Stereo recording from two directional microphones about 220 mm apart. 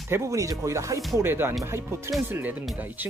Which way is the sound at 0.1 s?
15° right (ahead or behind).